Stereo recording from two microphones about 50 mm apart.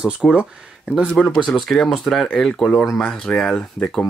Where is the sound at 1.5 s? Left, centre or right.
Centre.